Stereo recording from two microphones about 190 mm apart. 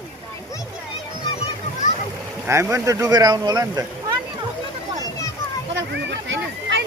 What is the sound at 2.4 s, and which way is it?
Speech, 15° right (ahead or behind).